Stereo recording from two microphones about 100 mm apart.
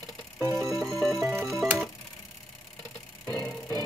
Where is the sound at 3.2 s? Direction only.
10° left (ahead or behind).